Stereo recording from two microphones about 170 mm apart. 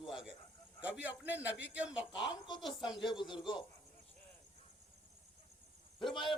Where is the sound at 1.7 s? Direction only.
5° right (ahead or behind).